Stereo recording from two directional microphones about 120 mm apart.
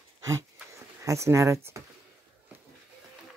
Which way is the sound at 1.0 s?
25° right (ahead or behind).